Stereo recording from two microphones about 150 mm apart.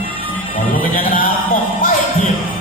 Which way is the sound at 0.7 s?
70° left (ahead or behind).